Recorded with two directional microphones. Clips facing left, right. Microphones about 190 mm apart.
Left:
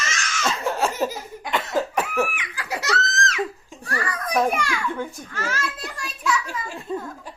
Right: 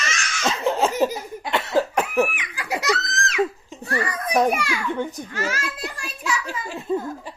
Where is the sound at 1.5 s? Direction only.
15° right (ahead or behind).